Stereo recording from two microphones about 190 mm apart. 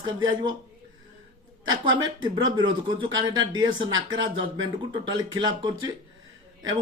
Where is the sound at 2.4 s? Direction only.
25° right (ahead or behind).